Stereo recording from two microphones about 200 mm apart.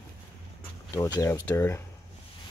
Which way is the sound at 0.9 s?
20° left (ahead or behind).